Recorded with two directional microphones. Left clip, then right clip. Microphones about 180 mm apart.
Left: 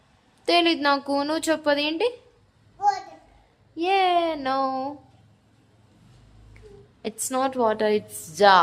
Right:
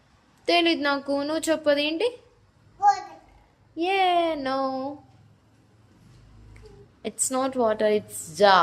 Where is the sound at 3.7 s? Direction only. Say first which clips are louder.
Left 1 dB; 5° left (ahead or behind).